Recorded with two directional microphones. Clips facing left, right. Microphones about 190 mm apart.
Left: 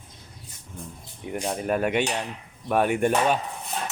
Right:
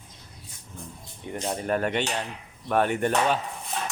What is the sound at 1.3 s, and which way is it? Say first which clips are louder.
Speech: left 1 dB; 10° left (ahead or behind).